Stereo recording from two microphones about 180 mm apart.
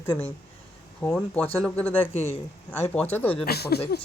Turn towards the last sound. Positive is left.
turn(degrees=60)  # may be behind; listen again after turning